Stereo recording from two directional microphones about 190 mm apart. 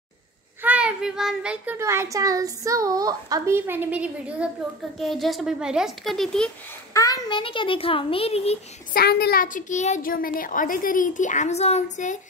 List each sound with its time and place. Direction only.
0.6 s a child's voice: 5° right (ahead or behind)
6.9 s a child's voice: 20° left (ahead or behind)
8.9 s a woman's voice: 55° left (ahead or behind); by 12.2 s 40° left (ahead or behind)